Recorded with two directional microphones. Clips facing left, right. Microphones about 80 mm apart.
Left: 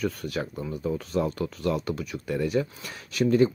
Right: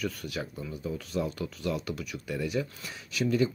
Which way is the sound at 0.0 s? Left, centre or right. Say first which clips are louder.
Left 5 dB; left.